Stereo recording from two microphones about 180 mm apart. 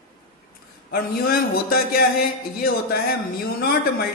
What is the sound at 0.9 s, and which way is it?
A man's voice, 55° left (ahead or behind).